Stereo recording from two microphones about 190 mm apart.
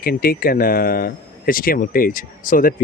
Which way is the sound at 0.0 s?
50° left (ahead or behind).